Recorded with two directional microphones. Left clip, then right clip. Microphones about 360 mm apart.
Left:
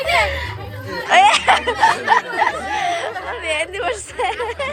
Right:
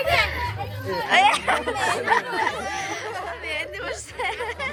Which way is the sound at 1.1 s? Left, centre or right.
Centre.